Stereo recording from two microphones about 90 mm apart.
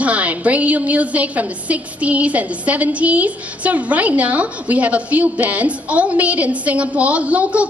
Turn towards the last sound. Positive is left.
turn(degrees=-15)  # may be behind; listen again after turning